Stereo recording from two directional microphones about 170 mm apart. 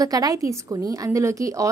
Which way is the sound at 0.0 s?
20° right (ahead or behind).